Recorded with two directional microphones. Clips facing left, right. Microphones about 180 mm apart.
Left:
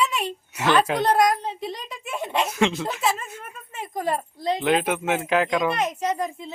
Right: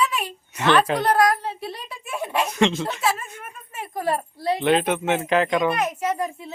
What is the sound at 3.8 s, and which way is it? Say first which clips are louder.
Speech: right 1 dB; 15° left (ahead or behind).